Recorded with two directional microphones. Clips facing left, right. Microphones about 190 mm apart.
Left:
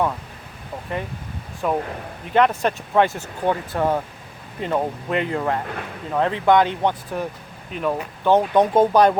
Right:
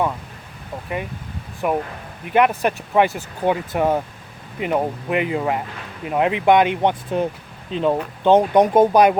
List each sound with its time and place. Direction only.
1.6 s speech: 10° right (ahead or behind)